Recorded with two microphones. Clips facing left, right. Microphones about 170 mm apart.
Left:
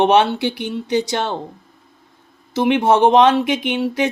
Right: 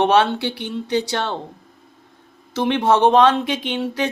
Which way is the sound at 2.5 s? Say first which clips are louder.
Left 3 dB; 10° left (ahead or behind).